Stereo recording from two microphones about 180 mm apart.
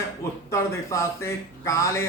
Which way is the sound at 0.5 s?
15° left (ahead or behind).